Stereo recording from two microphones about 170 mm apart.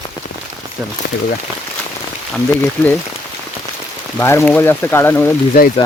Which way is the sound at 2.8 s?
10° left (ahead or behind).